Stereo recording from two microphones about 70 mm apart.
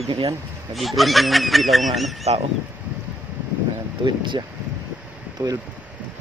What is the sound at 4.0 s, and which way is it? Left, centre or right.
Speech, right.